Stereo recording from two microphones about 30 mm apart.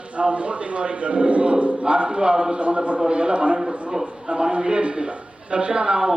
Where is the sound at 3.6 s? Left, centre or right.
Centre.